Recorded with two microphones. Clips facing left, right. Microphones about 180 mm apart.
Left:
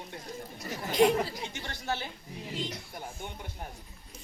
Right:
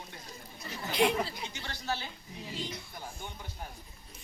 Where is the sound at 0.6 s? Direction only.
45° left (ahead or behind).